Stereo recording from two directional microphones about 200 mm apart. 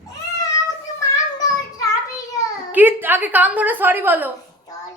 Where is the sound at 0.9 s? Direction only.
15° left (ahead or behind).